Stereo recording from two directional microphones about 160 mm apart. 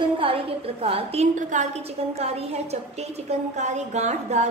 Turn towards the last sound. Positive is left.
turn(degrees=-45)  # may be behind; listen again after turning